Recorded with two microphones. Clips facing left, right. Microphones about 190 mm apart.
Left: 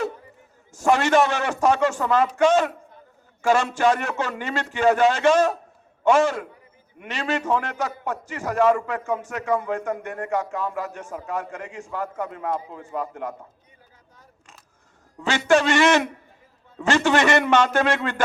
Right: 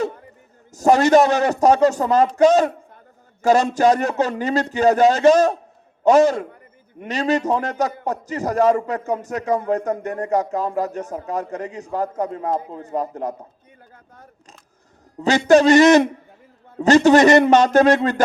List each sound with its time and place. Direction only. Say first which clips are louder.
0.7 s speech: right 5 dB; 40° right (ahead or behind)
15.2 s speech: right 6 dB; 40° right (ahead or behind)